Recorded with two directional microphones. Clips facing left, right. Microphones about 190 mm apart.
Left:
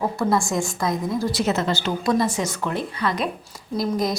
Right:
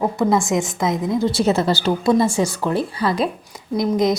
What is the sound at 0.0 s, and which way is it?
A woman's voice, 20° right (ahead or behind).